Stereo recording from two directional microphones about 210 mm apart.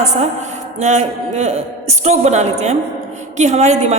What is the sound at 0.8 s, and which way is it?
A woman's voice, 35° right (ahead or behind).